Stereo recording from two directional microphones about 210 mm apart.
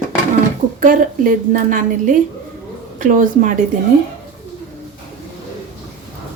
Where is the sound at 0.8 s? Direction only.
40° right (ahead or behind).